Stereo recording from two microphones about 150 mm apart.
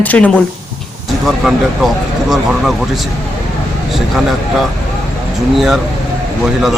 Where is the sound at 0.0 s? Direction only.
10° left (ahead or behind).